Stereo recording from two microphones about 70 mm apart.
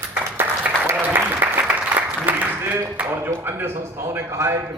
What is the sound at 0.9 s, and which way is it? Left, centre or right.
Applause, right.